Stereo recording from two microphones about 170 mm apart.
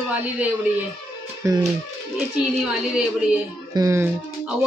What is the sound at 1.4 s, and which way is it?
Speech, 15° right (ahead or behind).